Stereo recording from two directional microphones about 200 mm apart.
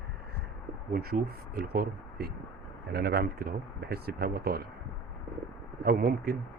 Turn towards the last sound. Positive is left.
turn(degrees=-50)  # may be behind; listen again after turning